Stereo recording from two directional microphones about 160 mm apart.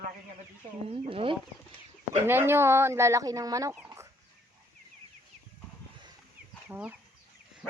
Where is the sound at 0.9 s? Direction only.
35° right (ahead or behind).